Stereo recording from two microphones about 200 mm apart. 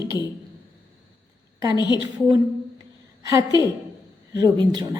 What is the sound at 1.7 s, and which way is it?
Speech, 20° left (ahead or behind).